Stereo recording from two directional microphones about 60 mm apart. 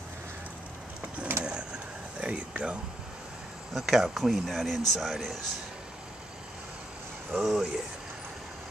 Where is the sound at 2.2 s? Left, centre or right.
Centre.